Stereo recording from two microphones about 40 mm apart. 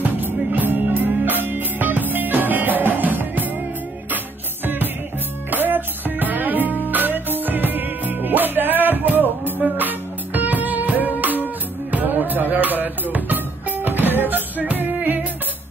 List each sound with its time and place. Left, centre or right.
0.0 s music: right
5.5 s music: right